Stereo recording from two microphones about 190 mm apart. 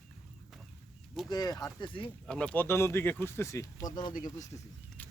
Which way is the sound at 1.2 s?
20° left (ahead or behind).